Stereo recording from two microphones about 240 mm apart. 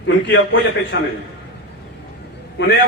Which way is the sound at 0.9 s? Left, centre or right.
Left.